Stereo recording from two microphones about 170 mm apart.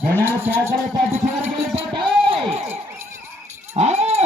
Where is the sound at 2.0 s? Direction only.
30° right (ahead or behind).